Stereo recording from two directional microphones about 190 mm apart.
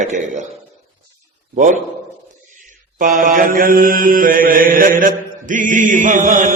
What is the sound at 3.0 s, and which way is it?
Mantra, 45° right (ahead or behind).